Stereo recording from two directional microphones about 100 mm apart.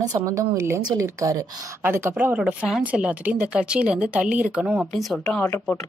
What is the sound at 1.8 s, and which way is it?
Speech, 25° right (ahead or behind).